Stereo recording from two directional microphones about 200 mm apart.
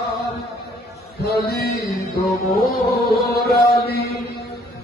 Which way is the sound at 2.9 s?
50° left (ahead or behind).